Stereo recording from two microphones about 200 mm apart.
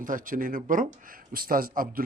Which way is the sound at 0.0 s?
40° right (ahead or behind).